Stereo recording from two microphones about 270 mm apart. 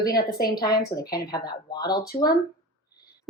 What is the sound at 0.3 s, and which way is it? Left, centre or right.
Speech, left.